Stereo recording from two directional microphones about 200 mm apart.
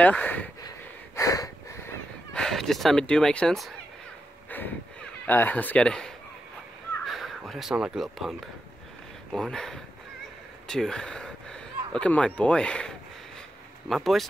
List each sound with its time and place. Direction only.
0.0 s speech: 5° left (ahead or behind)
0.6 s a sound: 15° left (ahead or behind)
2.3 s speech: centre (ahead or behind)
4.5 s vehicle: 10° left (ahead or behind)
5.2 s speech: 10° left (ahead or behind)
10.7 s a sound: 5° left (ahead or behind)
12.4 s speech: 5° left (ahead or behind)